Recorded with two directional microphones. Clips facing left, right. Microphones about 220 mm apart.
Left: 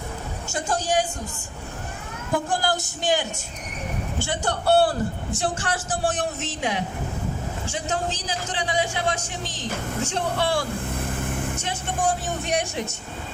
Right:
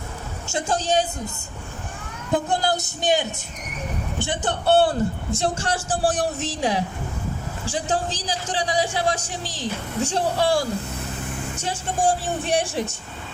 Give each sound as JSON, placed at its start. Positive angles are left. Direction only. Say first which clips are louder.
{"t": 0.5, "sound": "a woman's voice", "louder": "right 2 dB", "side_deg": -25}
{"t": 2.3, "sound": "a woman's voice", "louder": "right 2 dB", "side_deg": -20}
{"t": 10.9, "sound": "vehicle", "louder": "left 3 dB", "side_deg": 55}
{"t": 11.6, "sound": "speech", "louder": "right 5 dB", "side_deg": -30}